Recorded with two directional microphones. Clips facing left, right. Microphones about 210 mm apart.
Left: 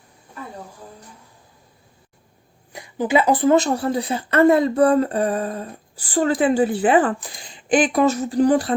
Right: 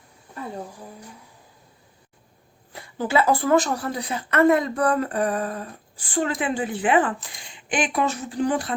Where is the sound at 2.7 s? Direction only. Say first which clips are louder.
Left 4 dB; 15° left (ahead or behind).